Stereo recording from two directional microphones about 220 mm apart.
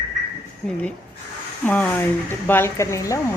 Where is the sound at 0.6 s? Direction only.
5° left (ahead or behind).